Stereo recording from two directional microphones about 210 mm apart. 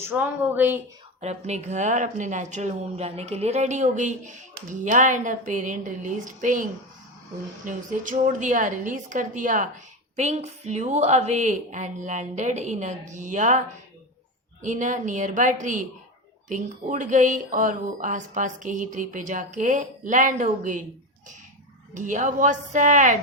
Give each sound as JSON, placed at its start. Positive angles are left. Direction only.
{"t": 0.0, "sound": "speech", "side_deg": -10}
{"t": 1.2, "sound": "speech", "side_deg": -30}
{"t": 14.6, "sound": "speech", "side_deg": -35}
{"t": 21.9, "sound": "speech", "side_deg": -35}